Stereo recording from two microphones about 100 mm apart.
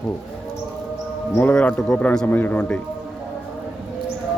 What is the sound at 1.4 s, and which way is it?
A man's voice, 15° left (ahead or behind).